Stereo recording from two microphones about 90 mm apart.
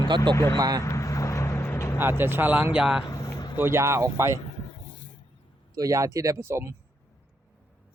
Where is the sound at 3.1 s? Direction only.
45° left (ahead or behind).